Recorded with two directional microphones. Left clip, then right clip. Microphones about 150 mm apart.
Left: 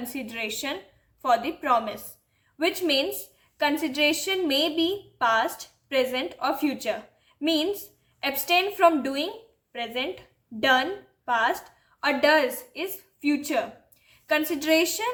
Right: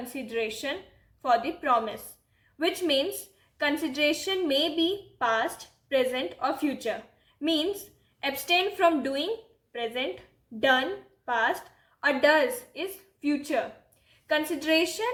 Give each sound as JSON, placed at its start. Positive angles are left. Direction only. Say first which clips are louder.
{"t": 0.1, "sound": "a woman's voice", "louder": "right 3 dB", "side_deg": 30}